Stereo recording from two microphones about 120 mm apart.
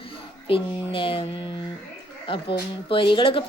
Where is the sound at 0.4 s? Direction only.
50° left (ahead or behind).